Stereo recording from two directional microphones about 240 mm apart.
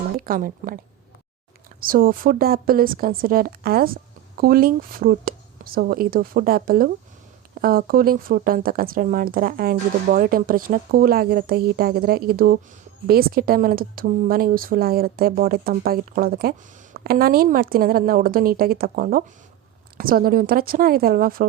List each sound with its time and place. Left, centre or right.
0.2 s speech: right
1.8 s speech: right